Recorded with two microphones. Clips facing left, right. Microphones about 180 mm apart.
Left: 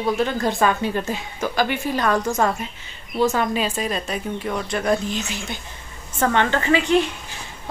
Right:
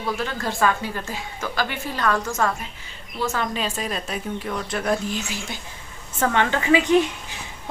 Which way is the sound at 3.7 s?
Centre (ahead or behind).